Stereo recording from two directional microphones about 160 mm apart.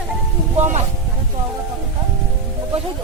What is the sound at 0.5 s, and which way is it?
Speech, 45° right (ahead or behind).